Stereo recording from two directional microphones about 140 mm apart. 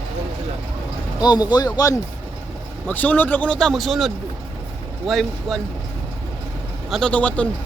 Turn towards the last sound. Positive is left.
turn(degrees=10)  # may be behind; listen again after turning